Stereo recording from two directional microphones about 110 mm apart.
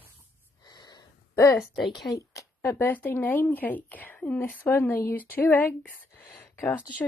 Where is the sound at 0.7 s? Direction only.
40° left (ahead or behind).